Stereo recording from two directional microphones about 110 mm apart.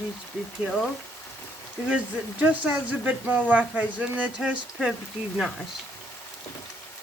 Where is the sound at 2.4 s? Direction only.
15° right (ahead or behind).